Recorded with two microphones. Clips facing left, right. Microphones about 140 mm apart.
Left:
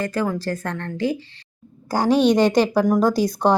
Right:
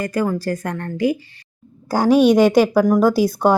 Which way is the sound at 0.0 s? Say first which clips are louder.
Right 2 dB; 10° right (ahead or behind).